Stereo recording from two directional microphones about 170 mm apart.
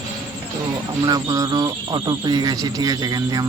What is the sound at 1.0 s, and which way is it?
Speech, 20° right (ahead or behind).